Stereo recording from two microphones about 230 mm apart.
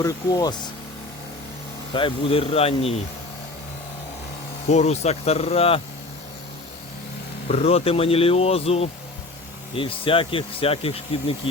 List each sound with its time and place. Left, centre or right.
0.0 s speech: centre
1.9 s speech: left
4.7 s speech: left
7.4 s speech: left